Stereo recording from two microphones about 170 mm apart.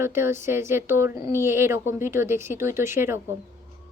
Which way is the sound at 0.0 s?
15° right (ahead or behind).